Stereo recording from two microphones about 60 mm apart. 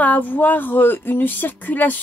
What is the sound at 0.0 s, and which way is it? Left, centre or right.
A woman's voice, left.